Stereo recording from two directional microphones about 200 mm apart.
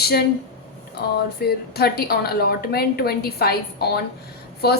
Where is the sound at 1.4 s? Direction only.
50° left (ahead or behind).